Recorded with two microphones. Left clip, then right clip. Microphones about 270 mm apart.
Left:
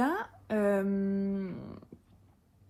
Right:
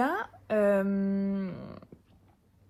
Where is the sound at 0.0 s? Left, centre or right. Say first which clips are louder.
Right 2 dB; right.